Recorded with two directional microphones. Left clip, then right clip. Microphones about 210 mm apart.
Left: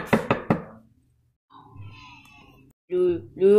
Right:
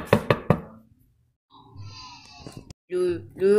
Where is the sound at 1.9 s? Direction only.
40° right (ahead or behind).